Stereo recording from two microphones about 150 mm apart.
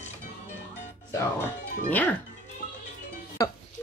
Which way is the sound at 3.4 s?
25° left (ahead or behind).